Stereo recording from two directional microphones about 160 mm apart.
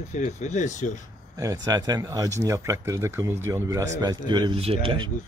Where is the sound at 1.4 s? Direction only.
20° right (ahead or behind).